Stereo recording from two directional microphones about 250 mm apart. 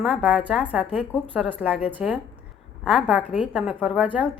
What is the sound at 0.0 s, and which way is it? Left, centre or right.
Speech, centre.